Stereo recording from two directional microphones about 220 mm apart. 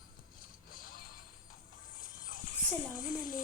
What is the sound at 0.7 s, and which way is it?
Music, 40° left (ahead or behind).